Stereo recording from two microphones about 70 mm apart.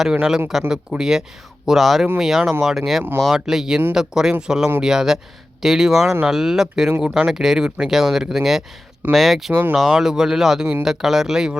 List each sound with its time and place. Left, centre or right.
0.0 s speech: centre